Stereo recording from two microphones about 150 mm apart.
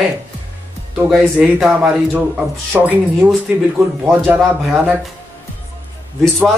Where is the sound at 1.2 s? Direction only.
Centre (ahead or behind).